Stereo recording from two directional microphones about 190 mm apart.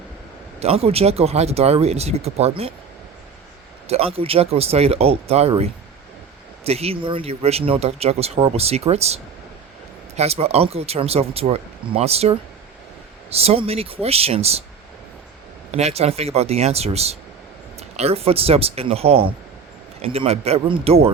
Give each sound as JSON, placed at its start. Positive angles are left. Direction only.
{"t": 0.6, "sound": "speech", "side_deg": -30}
{"t": 3.8, "sound": "speech", "side_deg": -30}
{"t": 15.7, "sound": "speech", "side_deg": -35}